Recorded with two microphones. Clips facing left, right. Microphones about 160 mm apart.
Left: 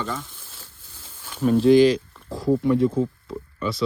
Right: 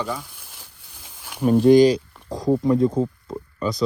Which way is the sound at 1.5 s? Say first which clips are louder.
Right 2 dB; 45° right (ahead or behind).